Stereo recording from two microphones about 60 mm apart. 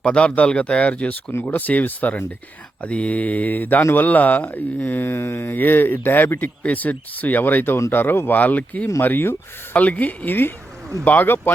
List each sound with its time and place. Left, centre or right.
0.0 s speech: centre
1.3 s speech: left
6.6 s speech: left
8.4 s speech: left
9.0 s speech: left
9.7 s speech: left